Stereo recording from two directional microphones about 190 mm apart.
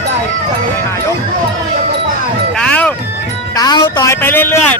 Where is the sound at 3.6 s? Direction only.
25° left (ahead or behind).